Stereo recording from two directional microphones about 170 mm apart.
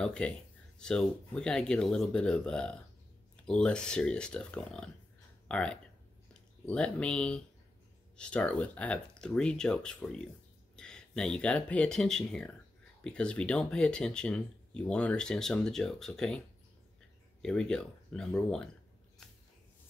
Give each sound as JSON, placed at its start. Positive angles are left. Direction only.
{"t": 0.0, "sound": "speech", "side_deg": 5}
{"t": 17.4, "sound": "speech", "side_deg": 5}